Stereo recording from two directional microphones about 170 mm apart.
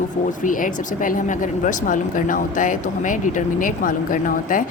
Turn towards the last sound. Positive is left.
turn(degrees=50)  # may be behind; listen again after turning